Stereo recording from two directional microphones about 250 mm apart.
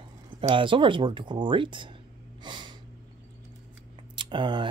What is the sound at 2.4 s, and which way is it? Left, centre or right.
Snort, centre.